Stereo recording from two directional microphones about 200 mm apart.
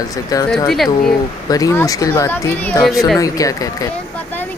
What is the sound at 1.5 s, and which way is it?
Speech, 15° left (ahead or behind).